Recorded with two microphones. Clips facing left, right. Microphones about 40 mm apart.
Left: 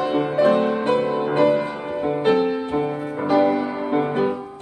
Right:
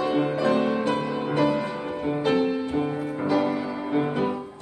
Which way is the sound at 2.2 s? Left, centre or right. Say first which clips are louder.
Left 4 dB; left.